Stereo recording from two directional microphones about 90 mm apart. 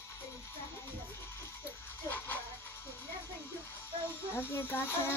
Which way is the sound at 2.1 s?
20° left (ahead or behind).